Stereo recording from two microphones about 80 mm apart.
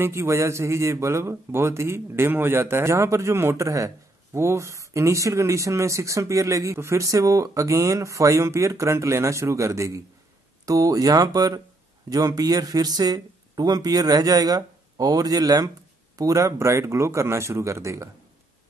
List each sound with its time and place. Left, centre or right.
0.0 s a man's voice: right